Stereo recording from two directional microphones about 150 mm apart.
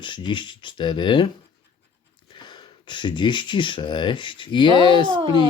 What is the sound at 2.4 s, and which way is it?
Speech, 30° left (ahead or behind).